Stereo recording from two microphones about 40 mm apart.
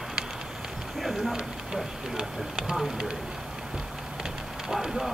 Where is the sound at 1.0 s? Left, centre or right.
Centre.